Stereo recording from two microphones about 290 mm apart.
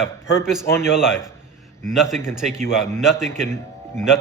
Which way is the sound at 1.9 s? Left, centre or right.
Centre.